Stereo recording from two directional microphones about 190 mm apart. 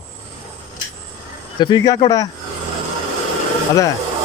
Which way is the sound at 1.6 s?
20° left (ahead or behind).